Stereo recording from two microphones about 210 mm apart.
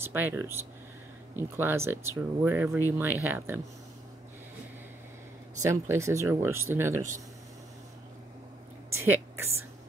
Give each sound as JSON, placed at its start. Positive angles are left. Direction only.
{"t": 0.0, "sound": "speech", "side_deg": -10}
{"t": 5.6, "sound": "speech", "side_deg": -15}
{"t": 8.9, "sound": "a sound", "side_deg": -10}